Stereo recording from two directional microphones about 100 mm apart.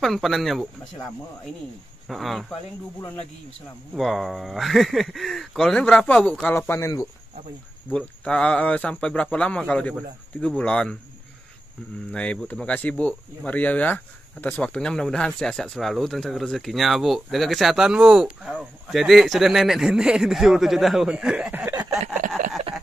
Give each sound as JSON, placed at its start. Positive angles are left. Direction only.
{"t": 0.0, "sound": "speech", "side_deg": 0}
{"t": 2.0, "sound": "speech", "side_deg": 0}
{"t": 3.9, "sound": "speech", "side_deg": 0}
{"t": 6.7, "sound": "speech", "side_deg": 30}
{"t": 7.9, "sound": "speech", "side_deg": 10}
{"t": 12.1, "sound": "speech", "side_deg": 10}